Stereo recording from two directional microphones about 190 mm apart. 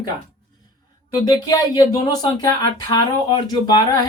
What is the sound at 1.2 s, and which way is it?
Speech, 20° left (ahead or behind).